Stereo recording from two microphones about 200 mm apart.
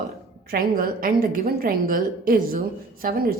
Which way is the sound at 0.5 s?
45° right (ahead or behind).